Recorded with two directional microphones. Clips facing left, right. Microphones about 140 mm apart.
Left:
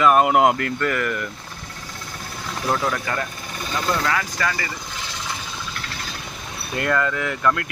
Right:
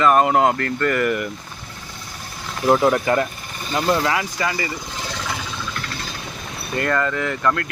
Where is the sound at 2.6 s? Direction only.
25° right (ahead or behind).